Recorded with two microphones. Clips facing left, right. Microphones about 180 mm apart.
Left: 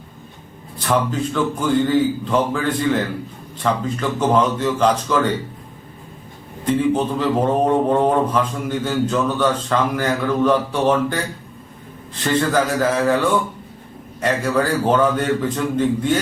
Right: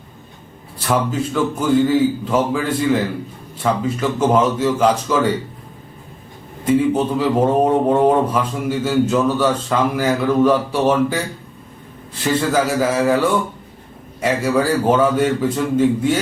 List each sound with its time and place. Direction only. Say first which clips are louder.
0.9 s speech: right 1 dB; 5° right (ahead or behind)
6.7 s speech: right 2 dB; 10° right (ahead or behind)
12.2 s speech: right 1 dB; 5° right (ahead or behind)